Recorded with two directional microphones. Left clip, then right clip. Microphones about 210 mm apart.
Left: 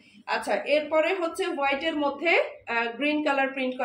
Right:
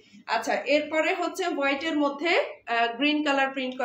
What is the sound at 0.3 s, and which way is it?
A woman's voice, 15° right (ahead or behind).